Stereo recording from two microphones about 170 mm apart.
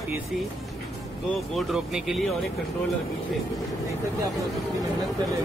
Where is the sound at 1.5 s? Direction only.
Centre (ahead or behind).